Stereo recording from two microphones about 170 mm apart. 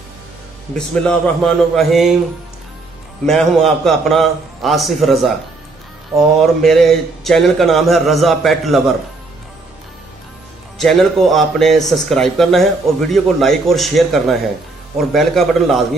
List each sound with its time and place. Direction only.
0.7 s speech: 5° left (ahead or behind)
3.3 s speech: centre (ahead or behind)
6.4 s speech: centre (ahead or behind)
10.8 s speech: centre (ahead or behind)